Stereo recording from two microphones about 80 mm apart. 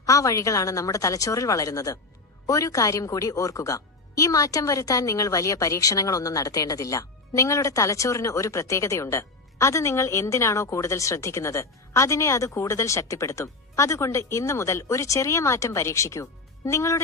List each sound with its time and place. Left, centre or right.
0.0 s a woman's voice: left